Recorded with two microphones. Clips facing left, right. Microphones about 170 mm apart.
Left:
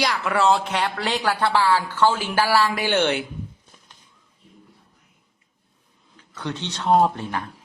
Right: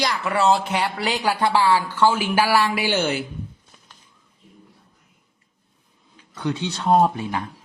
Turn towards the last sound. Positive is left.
turn(degrees=-10)  # may be behind; listen again after turning